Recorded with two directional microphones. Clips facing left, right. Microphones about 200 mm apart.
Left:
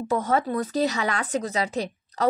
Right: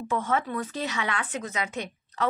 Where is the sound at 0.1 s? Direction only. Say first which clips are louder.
Left 4 dB; 40° left (ahead or behind).